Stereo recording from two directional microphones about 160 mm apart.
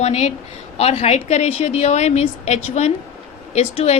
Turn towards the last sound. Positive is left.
turn(degrees=45)  # may be behind; listen again after turning